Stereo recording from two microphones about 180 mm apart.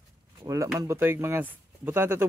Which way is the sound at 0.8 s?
15° right (ahead or behind).